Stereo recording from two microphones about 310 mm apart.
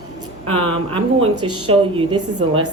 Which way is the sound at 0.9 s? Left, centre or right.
Centre.